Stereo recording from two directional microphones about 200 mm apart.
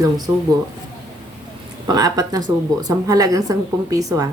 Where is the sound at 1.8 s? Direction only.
20° right (ahead or behind).